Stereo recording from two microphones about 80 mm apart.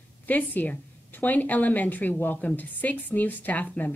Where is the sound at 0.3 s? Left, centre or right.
Left.